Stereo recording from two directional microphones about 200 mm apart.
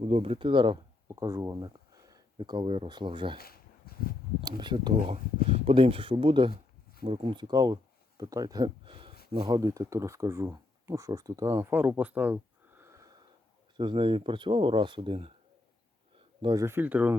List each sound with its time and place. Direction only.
0.0 s speech: 30° right (ahead or behind)
3.3 s a sound: 50° left (ahead or behind)
4.4 s speech: 20° right (ahead or behind)
13.7 s speech: 25° right (ahead or behind)
16.4 s speech: 20° right (ahead or behind)